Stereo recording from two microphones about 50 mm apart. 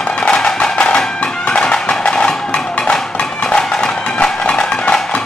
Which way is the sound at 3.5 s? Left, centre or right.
Centre.